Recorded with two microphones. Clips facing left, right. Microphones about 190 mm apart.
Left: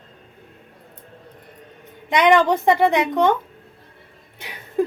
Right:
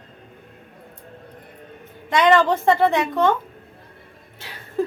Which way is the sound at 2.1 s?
20° left (ahead or behind).